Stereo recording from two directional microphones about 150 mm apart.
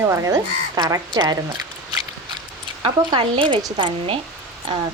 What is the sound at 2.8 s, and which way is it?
A woman's voice, 35° right (ahead or behind).